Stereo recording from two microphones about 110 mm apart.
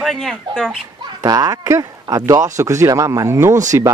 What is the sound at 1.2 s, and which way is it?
Speech, 35° right (ahead or behind).